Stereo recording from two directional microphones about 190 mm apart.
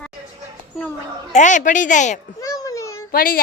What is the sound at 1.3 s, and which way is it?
Speech, 40° left (ahead or behind).